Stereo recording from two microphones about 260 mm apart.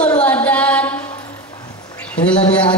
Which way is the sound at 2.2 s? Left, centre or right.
Centre.